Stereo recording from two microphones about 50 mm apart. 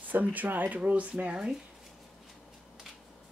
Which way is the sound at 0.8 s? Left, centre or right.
Right.